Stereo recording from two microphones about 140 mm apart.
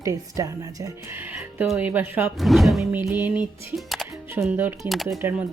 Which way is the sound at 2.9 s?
15° right (ahead or behind).